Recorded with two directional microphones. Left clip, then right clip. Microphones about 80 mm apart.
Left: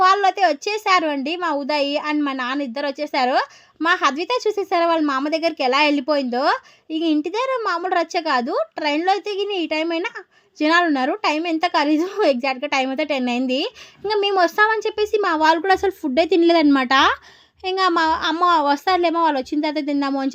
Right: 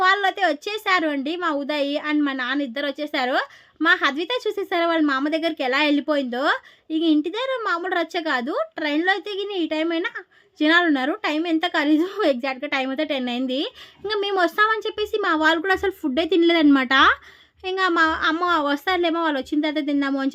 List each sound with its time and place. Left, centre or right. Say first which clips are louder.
0.0 s a woman's voice: left 3 dB; left
15.9 s a woman's voice: left 4 dB; centre